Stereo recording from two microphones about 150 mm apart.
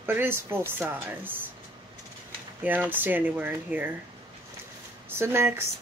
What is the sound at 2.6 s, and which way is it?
Speech, 10° right (ahead or behind).